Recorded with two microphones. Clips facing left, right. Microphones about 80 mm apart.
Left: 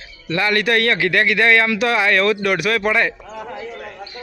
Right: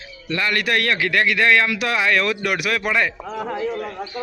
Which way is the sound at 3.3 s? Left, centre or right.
Right.